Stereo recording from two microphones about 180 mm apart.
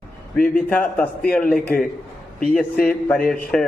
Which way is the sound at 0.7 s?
10° left (ahead or behind).